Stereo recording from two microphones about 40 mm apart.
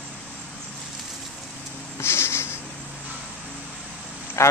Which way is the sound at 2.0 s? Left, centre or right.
Left.